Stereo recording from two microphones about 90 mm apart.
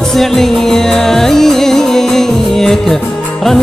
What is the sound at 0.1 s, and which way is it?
Music, 5° left (ahead or behind).